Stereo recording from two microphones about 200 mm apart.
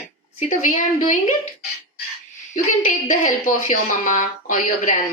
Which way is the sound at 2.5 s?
40° left (ahead or behind).